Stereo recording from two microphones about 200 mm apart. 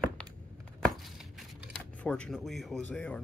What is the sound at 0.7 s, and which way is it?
Speech, centre (ahead or behind).